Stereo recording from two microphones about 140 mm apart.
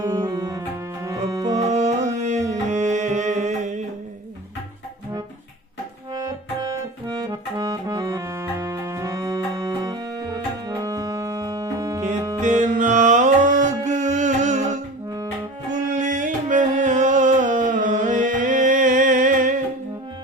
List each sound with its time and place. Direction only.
0.0 s music: 30° right (ahead or behind)
1.6 s music: 55° right (ahead or behind)
7.1 s accordion: 30° right (ahead or behind)
12.4 s music: 60° right (ahead or behind)
15.9 s music: 60° right (ahead or behind)